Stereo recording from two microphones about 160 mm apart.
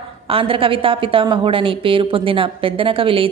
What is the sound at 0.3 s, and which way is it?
A woman's voice, 35° right (ahead or behind).